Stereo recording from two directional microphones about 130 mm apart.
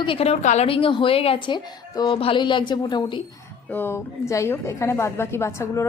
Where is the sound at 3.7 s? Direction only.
15° left (ahead or behind).